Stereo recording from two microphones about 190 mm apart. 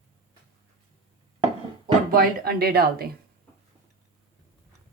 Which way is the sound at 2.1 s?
50° right (ahead or behind).